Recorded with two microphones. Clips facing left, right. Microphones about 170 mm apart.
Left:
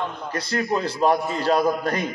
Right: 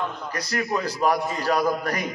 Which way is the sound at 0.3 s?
30° left (ahead or behind).